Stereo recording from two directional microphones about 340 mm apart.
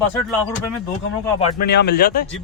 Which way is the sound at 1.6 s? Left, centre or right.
Left.